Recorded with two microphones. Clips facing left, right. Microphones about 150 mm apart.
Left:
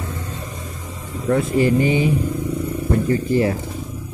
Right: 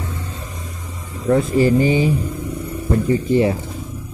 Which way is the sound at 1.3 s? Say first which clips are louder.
Right 2 dB; 35° right (ahead or behind).